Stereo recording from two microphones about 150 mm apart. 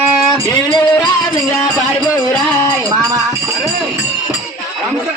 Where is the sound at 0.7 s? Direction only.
30° left (ahead or behind).